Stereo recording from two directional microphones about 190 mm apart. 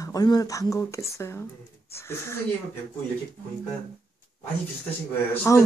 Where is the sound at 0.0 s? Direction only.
20° left (ahead or behind).